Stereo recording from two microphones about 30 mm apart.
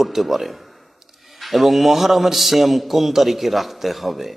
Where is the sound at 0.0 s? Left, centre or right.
Centre.